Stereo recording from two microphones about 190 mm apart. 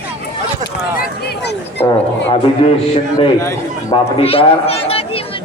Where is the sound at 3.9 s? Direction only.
30° left (ahead or behind).